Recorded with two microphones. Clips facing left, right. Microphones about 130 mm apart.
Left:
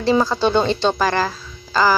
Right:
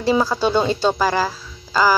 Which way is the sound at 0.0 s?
10° right (ahead or behind).